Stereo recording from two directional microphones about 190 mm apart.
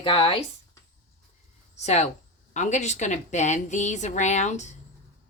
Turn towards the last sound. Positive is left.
turn(degrees=40)  # may be behind; listen again after turning